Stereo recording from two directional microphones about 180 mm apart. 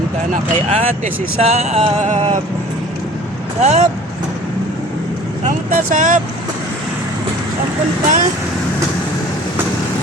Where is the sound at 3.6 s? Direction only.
40° right (ahead or behind).